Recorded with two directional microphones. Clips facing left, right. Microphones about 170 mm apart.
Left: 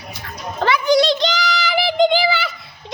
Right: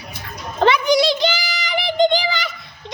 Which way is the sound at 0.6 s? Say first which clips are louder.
Even; 20° right (ahead or behind).